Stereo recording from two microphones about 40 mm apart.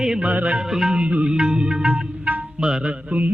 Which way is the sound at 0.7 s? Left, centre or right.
Centre.